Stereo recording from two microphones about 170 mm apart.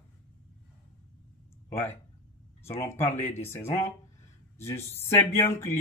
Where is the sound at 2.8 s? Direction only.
15° left (ahead or behind).